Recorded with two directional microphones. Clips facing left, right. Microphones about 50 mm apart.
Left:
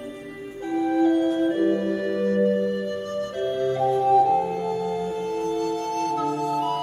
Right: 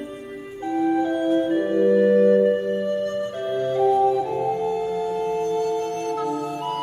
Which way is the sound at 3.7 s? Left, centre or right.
Centre.